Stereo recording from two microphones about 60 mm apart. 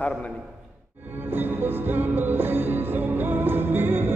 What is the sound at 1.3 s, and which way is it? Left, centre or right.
Music, right.